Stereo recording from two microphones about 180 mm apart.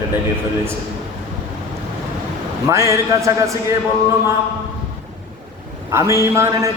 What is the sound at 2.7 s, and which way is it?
Speech, 15° right (ahead or behind).